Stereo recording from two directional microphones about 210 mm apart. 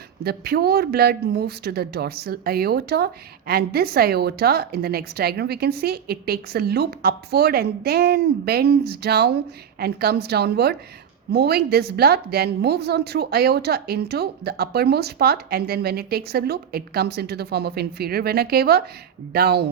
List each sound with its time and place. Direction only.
0.3 s a woman's voice: 50° right (ahead or behind)